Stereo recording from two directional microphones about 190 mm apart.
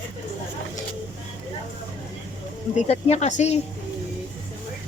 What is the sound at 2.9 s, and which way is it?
Speech, 35° left (ahead or behind).